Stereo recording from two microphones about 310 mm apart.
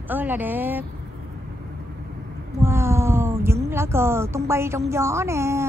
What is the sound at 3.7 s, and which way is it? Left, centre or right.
Speech, centre.